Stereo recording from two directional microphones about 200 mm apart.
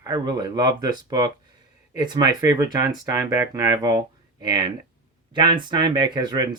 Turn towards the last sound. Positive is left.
turn(degrees=-20)  # may be behind; listen again after turning